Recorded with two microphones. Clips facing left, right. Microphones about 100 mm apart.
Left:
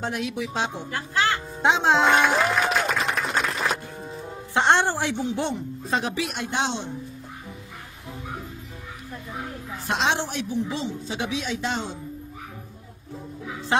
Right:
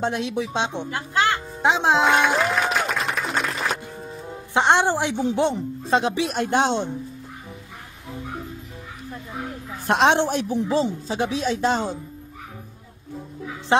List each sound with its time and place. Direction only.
0.0 s a woman's voice: 30° right (ahead or behind); by 2.0 s 10° right (ahead or behind)
2.0 s applause: centre (ahead or behind)
4.6 s a woman's voice: 15° right (ahead or behind)
6.3 s a woman's voice: 50° right (ahead or behind)
9.8 s a woman's voice: 55° right (ahead or behind)
10.7 s speech: 35° right (ahead or behind)
13.7 s speech: 25° right (ahead or behind)